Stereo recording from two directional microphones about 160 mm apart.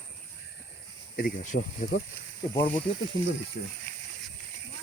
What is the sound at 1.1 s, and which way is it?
Speech, 55° left (ahead or behind).